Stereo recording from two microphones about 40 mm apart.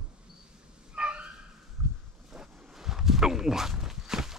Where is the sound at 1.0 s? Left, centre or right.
Right.